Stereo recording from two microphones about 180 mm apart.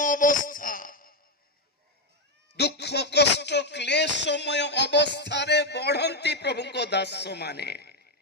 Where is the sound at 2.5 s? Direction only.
65° left (ahead or behind).